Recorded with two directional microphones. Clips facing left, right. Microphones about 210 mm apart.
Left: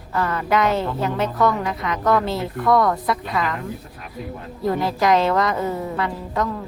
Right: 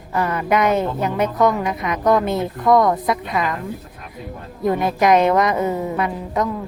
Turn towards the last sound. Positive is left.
turn(degrees=-20)  # may be behind; listen again after turning